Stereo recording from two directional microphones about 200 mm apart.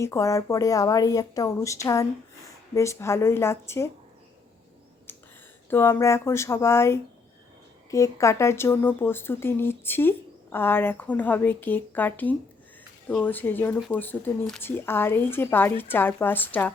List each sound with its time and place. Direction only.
0.0 s speech: 15° left (ahead or behind)
5.1 s a sound: 10° left (ahead or behind)
5.7 s speech: 10° left (ahead or behind)